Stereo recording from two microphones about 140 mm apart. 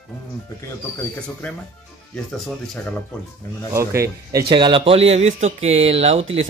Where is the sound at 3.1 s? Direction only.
5° left (ahead or behind).